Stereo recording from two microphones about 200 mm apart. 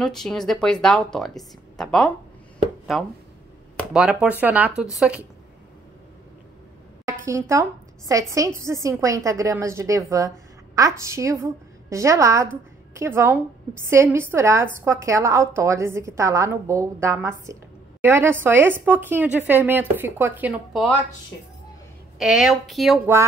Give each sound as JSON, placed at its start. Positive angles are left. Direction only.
{"t": 0.0, "sound": "a woman's voice", "side_deg": 5}
{"t": 7.1, "sound": "a woman's voice", "side_deg": -15}
{"t": 22.2, "sound": "a woman's voice", "side_deg": 0}